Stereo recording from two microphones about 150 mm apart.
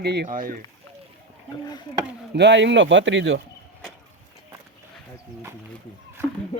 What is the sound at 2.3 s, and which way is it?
Speech, 90° right.